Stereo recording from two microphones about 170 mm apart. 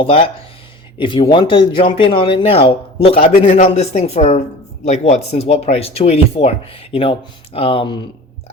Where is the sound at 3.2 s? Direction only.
55° left (ahead or behind).